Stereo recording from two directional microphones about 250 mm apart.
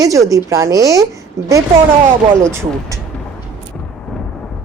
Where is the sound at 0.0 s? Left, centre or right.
Centre.